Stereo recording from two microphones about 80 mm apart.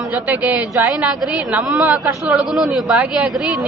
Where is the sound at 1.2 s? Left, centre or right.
Centre.